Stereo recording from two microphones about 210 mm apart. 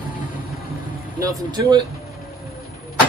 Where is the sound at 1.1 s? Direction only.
20° right (ahead or behind).